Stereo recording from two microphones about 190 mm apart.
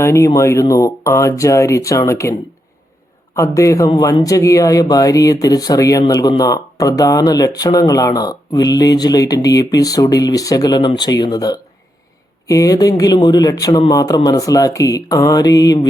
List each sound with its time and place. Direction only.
0.0 s speech: 15° left (ahead or behind)
3.3 s speech: 15° left (ahead or behind)